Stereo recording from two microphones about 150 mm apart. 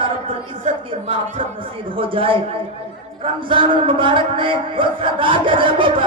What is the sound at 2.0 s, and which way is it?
Speech, 35° right (ahead or behind).